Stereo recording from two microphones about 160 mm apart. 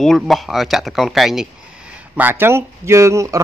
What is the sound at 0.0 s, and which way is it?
Speech, centre (ahead or behind).